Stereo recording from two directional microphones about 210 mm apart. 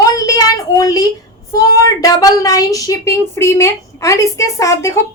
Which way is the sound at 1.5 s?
15° left (ahead or behind).